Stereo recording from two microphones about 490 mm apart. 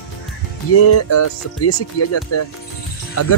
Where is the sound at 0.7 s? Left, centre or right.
Left.